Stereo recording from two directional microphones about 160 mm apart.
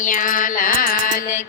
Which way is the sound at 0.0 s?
55° left (ahead or behind).